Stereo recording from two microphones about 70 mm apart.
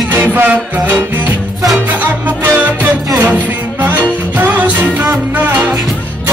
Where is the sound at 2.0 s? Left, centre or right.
Right.